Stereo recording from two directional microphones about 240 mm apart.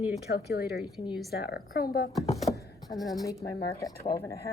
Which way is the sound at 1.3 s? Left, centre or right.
Left.